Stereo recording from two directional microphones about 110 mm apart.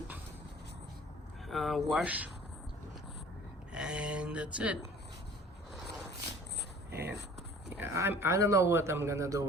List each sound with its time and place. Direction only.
1.5 s speech: centre (ahead or behind)
2.0 s speech: 15° right (ahead or behind)
3.7 s speech: 10° right (ahead or behind)
7.8 s speech: 20° right (ahead or behind)